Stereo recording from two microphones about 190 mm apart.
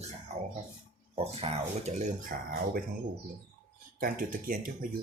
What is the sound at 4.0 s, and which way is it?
Speech, 50° right (ahead or behind).